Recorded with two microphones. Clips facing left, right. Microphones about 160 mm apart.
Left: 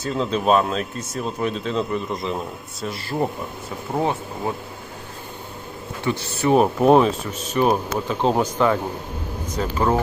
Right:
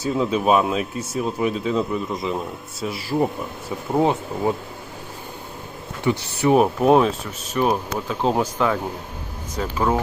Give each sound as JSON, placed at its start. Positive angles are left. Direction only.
{"t": 0.0, "sound": "speech", "side_deg": -10}
{"t": 4.0, "sound": "speech", "side_deg": -20}
{"t": 6.1, "sound": "speech", "side_deg": -15}
{"t": 6.6, "sound": "speech", "side_deg": 0}